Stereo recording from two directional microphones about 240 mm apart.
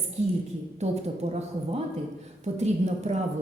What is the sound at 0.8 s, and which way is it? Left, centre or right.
A woman's voice, right.